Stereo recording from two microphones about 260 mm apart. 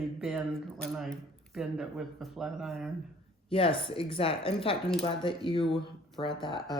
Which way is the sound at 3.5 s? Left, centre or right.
Left.